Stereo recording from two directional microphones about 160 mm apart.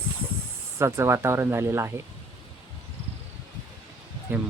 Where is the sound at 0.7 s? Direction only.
15° right (ahead or behind).